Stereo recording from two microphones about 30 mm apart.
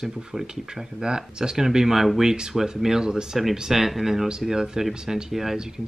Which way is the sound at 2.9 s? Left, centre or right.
Right.